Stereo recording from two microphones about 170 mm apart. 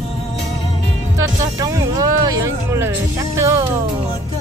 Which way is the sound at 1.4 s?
20° right (ahead or behind).